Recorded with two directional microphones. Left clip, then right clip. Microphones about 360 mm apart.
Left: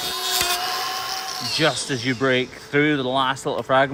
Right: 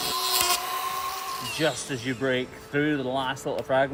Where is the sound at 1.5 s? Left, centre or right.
Left.